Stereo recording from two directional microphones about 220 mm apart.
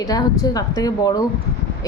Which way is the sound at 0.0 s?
15° left (ahead or behind).